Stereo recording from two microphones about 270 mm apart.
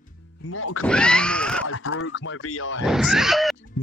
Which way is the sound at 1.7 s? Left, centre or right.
Left.